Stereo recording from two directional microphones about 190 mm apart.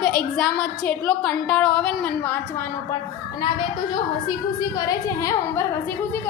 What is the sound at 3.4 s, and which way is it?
A woman's voice, 25° left (ahead or behind).